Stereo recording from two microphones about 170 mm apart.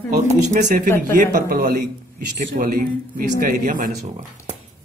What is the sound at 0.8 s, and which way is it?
Speech, 15° left (ahead or behind).